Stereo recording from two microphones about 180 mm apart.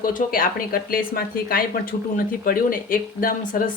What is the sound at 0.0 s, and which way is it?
A woman's voice, 50° left (ahead or behind).